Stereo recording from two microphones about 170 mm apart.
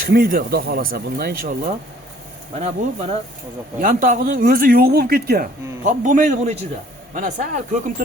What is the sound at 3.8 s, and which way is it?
Speech, 50° right (ahead or behind).